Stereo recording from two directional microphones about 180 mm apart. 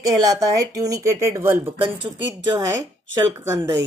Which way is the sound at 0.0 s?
20° right (ahead or behind).